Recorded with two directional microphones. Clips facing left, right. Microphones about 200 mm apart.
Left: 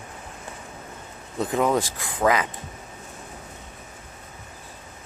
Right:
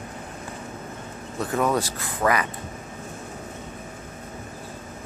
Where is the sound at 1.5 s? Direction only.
20° left (ahead or behind).